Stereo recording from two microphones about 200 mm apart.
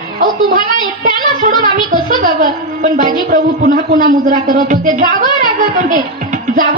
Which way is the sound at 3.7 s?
55° right (ahead or behind).